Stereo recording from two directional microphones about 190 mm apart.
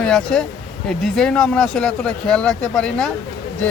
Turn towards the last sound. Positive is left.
turn(degrees=5)  # may be behind; listen again after turning